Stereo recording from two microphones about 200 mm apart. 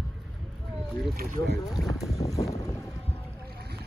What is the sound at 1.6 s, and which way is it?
Speech, 20° left (ahead or behind).